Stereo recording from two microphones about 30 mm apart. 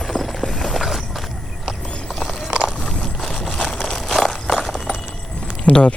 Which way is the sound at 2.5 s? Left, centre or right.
Right.